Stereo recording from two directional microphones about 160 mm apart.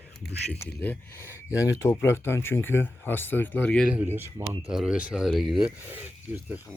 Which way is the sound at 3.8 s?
10° right (ahead or behind).